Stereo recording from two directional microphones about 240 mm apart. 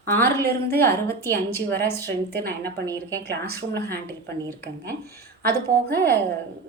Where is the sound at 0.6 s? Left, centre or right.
Centre.